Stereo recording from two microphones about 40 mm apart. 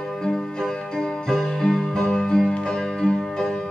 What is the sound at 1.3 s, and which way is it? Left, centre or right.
Music, centre.